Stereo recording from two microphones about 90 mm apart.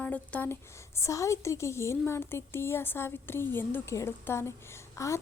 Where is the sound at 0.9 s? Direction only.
35° left (ahead or behind).